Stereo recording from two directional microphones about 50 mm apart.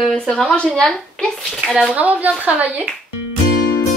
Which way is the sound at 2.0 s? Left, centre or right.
Right.